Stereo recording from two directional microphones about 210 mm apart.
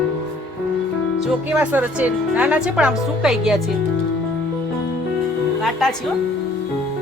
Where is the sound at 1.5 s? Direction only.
5° right (ahead or behind).